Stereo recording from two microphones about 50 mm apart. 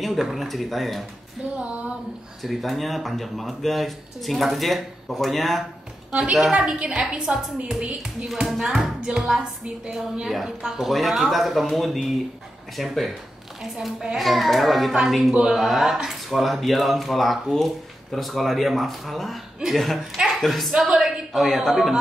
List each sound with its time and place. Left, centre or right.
0.0 s speech: centre
1.6 s a woman's voice: right
2.4 s speech: centre
6.5 s a woman's voice: centre
8.5 s speech: centre
9.0 s a woman's voice: centre